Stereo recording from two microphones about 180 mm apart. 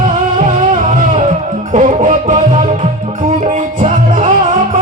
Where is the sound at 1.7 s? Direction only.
45° right (ahead or behind).